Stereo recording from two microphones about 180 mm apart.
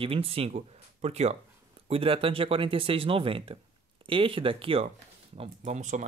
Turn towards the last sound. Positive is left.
turn(degrees=-40)  # may be behind; listen again after turning